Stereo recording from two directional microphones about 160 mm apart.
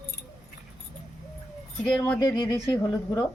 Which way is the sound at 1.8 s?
5° left (ahead or behind).